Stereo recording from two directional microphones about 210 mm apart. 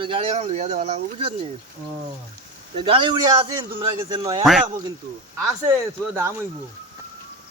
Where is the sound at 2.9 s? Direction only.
25° right (ahead or behind).